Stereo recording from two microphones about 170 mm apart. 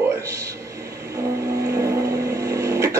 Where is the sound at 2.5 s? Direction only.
20° right (ahead or behind).